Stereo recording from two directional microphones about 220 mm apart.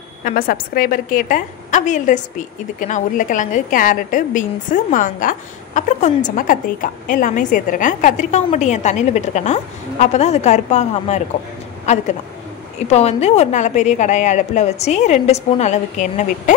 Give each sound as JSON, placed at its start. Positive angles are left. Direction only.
{"t": 0.2, "sound": "a woman's voice", "side_deg": 40}